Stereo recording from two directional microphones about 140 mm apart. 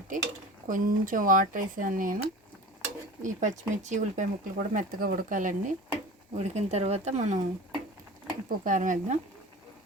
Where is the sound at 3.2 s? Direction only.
60° right (ahead or behind).